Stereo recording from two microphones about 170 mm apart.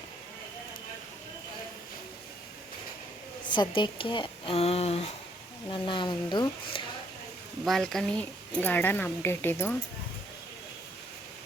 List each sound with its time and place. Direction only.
3.8 s speech: 30° left (ahead or behind)
7.6 s a woman's voice: centre (ahead or behind)